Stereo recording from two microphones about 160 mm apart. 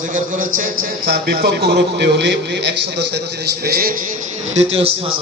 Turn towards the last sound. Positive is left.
turn(degrees=-40)  # may be behind; listen again after turning